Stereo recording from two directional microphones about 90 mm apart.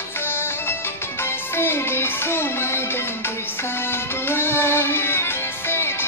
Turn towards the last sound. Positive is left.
turn(degrees=25)  # may be behind; listen again after turning